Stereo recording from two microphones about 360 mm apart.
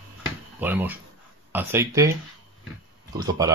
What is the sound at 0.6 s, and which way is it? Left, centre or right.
Speech, centre.